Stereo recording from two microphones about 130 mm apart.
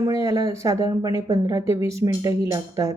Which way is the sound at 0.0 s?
25° right (ahead or behind).